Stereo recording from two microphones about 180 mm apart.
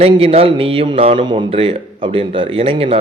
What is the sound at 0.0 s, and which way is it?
A man's voice, 30° right (ahead or behind).